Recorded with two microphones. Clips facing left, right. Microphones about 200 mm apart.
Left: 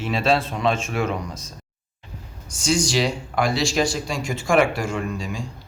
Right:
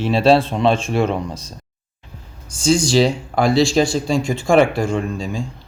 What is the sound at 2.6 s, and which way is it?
Speech, 30° right (ahead or behind).